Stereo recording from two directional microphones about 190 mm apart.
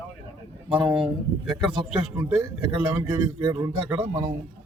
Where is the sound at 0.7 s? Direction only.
5° right (ahead or behind).